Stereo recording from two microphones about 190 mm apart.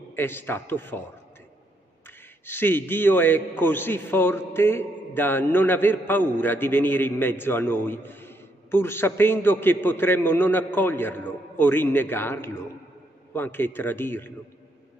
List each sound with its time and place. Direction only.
0.1 s a man's voice: 10° left (ahead or behind)
2.4 s a man's voice: 10° left (ahead or behind)